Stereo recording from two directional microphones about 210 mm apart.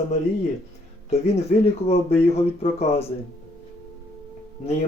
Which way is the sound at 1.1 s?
30° left (ahead or behind).